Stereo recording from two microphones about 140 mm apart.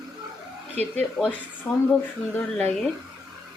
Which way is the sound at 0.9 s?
10° left (ahead or behind).